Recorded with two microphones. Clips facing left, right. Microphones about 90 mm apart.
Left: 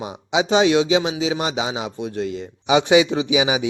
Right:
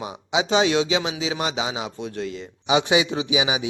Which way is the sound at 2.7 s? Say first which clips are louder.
Left 5 dB; 35° left (ahead or behind).